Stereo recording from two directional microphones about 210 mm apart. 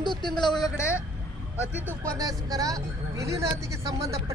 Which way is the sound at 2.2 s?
15° right (ahead or behind).